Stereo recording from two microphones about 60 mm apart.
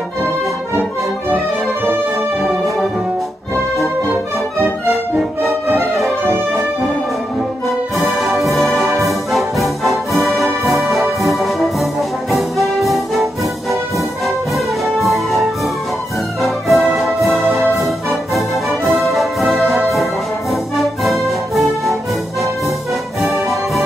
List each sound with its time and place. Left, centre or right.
5.5 s music: right
7.6 s brass instrument: centre
14.9 s music: centre
23.2 s music: centre